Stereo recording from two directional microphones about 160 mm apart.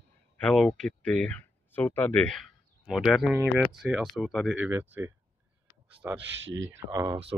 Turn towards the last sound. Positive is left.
turn(degrees=-20)  # may be behind; listen again after turning